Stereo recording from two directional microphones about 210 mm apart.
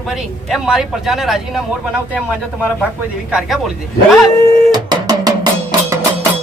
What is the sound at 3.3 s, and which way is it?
Speech, centre (ahead or behind).